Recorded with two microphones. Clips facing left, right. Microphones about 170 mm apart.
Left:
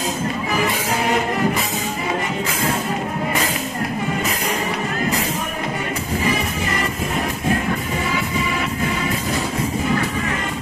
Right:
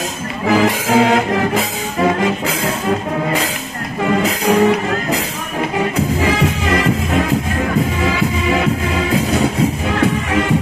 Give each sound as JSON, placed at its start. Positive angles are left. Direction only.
{"t": 0.5, "sound": "music", "side_deg": -90}
{"t": 6.2, "sound": "music", "side_deg": -90}